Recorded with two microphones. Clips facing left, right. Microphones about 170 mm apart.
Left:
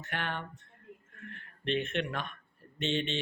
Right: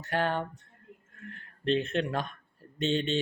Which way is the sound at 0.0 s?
40° right (ahead or behind).